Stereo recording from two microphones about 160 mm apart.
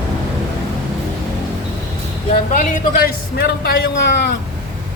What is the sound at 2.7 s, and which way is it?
A man's voice, 70° left (ahead or behind).